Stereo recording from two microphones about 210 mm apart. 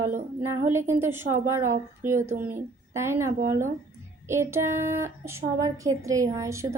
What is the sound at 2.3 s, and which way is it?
Speech, 35° right (ahead or behind).